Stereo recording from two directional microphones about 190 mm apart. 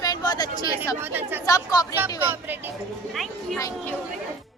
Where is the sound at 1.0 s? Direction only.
10° right (ahead or behind).